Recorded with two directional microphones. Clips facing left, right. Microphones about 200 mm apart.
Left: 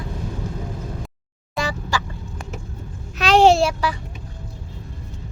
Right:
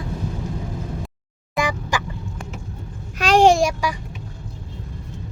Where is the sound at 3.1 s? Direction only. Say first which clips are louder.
Even; 10° right (ahead or behind).